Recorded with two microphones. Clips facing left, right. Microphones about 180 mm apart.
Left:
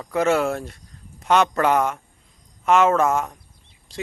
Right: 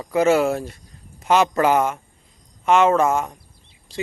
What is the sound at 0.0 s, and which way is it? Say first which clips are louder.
Speech: right 3 dB; 5° right (ahead or behind).